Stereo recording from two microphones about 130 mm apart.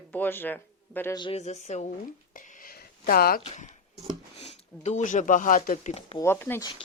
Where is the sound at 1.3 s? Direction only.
60° left (ahead or behind).